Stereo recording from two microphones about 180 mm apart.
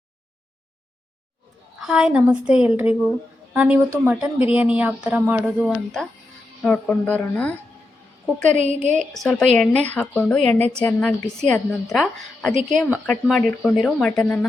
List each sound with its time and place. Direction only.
1.9 s speech: 5° right (ahead or behind)
5.6 s a woman's voice: centre (ahead or behind)
8.5 s a woman's voice: 40° right (ahead or behind)
9.0 s a woman's voice: centre (ahead or behind)